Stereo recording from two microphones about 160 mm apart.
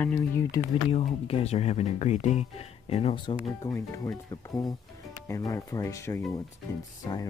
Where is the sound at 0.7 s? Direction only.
40° left (ahead or behind); by 7.3 s 20° left (ahead or behind).